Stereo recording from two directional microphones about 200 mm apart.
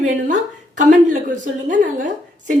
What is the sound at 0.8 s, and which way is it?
A woman's voice, 40° right (ahead or behind).